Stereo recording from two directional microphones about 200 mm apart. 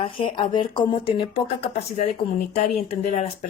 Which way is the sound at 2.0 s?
35° left (ahead or behind).